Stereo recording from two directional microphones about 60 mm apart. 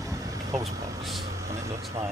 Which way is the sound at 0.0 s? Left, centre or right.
Right.